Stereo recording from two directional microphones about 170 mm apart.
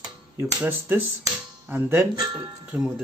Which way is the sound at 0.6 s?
10° right (ahead or behind).